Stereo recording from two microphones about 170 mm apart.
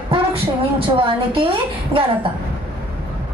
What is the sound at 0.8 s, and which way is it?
Speech, 30° right (ahead or behind).